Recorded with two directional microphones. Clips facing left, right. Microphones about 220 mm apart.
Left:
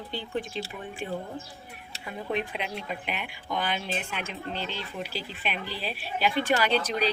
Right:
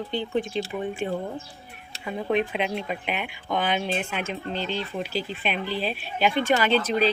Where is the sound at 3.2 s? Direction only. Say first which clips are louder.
Right 5 dB; 60° right (ahead or behind).